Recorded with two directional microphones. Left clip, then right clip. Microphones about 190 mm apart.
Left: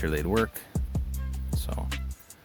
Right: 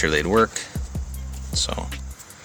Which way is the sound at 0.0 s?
45° left (ahead or behind).